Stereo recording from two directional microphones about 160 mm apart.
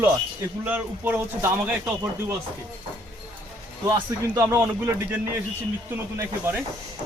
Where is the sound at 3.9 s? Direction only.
20° right (ahead or behind).